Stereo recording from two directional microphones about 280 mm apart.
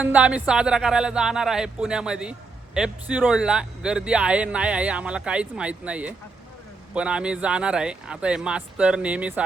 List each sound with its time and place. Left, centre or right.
0.0 s speech: centre